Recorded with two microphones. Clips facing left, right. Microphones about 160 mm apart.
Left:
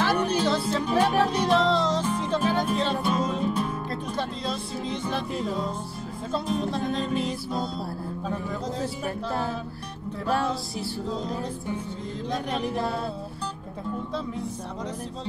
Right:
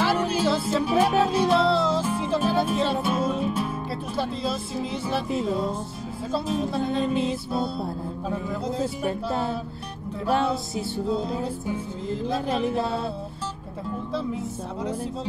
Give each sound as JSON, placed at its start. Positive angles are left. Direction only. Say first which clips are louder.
{"t": 0.0, "sound": "music", "louder": "right 1 dB", "side_deg": -5}
{"t": 9.0, "sound": "music", "louder": "right 3 dB", "side_deg": -20}
{"t": 12.4, "sound": "music", "louder": "right 3 dB", "side_deg": -25}